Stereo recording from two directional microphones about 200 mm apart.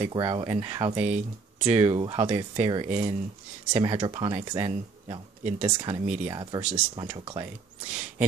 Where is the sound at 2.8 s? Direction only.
40° right (ahead or behind).